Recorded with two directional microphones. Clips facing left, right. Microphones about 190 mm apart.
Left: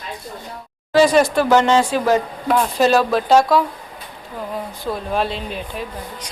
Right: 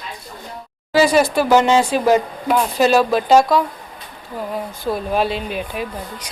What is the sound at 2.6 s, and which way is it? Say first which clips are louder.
Speech: right 1 dB; centre (ahead or behind).